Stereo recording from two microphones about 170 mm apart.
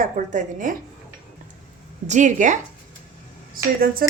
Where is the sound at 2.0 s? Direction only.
45° right (ahead or behind).